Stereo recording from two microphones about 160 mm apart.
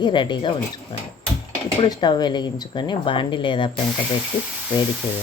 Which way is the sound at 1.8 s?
30° left (ahead or behind).